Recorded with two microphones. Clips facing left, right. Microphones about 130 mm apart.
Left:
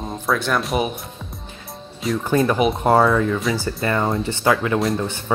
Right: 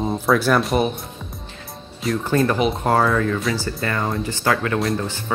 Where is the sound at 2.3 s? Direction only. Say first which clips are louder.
Left 1 dB; 15° left (ahead or behind).